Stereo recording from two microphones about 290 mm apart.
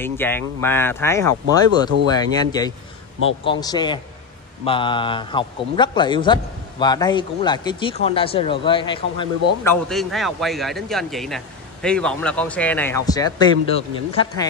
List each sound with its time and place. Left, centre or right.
0.0 s a man's voice: centre